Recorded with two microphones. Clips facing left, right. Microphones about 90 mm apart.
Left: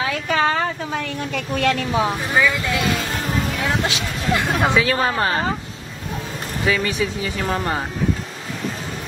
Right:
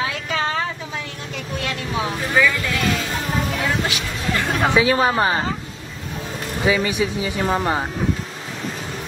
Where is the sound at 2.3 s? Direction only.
20° left (ahead or behind).